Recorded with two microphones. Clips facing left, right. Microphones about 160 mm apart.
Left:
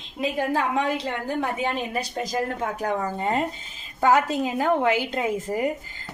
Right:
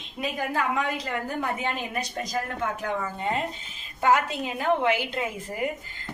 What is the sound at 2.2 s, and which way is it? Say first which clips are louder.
A woman's voice: left 3 dB; 30° left (ahead or behind).